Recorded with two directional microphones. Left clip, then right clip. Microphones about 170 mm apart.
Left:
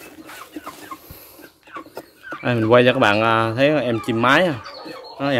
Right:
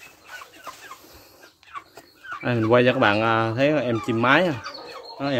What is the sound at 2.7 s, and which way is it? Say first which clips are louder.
Speech: left 4 dB; 15° left (ahead or behind).